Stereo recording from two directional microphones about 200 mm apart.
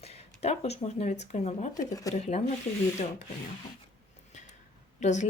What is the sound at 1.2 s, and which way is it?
Speech, 35° left (ahead or behind).